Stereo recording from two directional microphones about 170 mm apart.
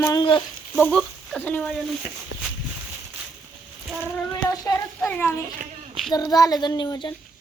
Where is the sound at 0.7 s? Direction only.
5° left (ahead or behind).